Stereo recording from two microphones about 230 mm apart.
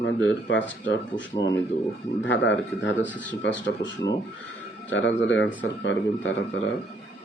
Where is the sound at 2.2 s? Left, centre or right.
Left.